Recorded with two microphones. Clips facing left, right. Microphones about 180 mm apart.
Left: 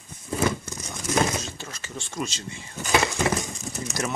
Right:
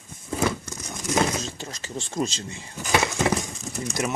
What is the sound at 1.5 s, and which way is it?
Speech, 35° right (ahead or behind).